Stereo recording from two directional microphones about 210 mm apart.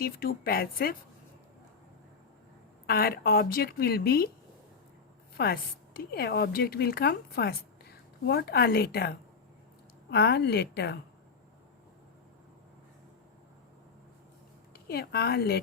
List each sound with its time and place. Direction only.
0.0 s a woman's voice: 45° left (ahead or behind)
2.8 s a woman's voice: 45° left (ahead or behind)
5.4 s a woman's voice: 50° left (ahead or behind)
14.8 s a woman's voice: 50° left (ahead or behind)